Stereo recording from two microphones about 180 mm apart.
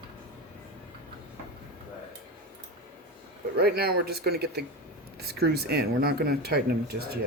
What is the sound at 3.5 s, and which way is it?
Speech, 60° right (ahead or behind).